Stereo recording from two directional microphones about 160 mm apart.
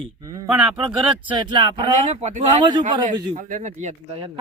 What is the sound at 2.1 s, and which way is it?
Speech, 45° right (ahead or behind).